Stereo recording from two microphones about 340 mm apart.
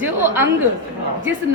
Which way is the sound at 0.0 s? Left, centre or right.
Centre.